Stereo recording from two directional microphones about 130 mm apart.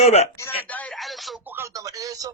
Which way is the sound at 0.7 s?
10° left (ahead or behind).